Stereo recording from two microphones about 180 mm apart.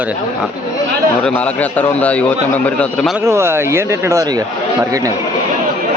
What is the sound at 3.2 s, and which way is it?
Speech, 15° right (ahead or behind).